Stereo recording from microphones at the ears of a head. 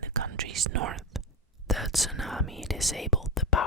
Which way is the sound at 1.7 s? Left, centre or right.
Centre.